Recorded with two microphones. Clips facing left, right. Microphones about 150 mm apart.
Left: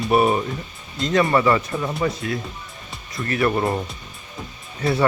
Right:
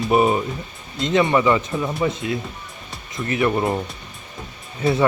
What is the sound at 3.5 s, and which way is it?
Speech, 5° right (ahead or behind).